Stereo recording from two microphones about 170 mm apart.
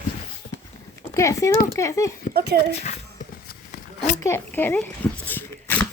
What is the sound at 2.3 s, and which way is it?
Speech, 70° right (ahead or behind).